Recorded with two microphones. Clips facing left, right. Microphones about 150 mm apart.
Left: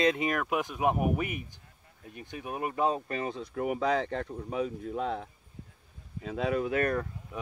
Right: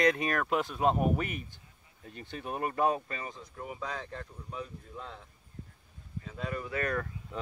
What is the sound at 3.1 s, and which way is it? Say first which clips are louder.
Speech: left 8 dB; 70° left (ahead or behind).